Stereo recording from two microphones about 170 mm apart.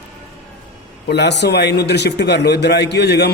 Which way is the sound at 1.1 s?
85° left.